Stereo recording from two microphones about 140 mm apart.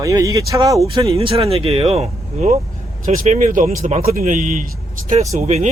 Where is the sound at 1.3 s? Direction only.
45° right (ahead or behind); by 4.7 s 70° right (ahead or behind).